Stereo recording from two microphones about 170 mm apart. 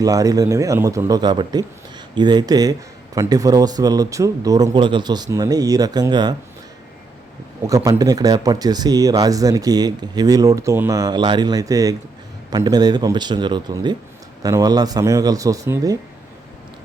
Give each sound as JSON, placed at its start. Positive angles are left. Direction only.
{"t": 0.0, "sound": "speech", "side_deg": -20}
{"t": 7.7, "sound": "speech", "side_deg": -20}